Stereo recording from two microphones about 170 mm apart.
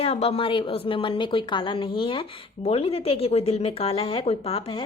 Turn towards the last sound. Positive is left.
turn(degrees=35)  # may be behind; listen again after turning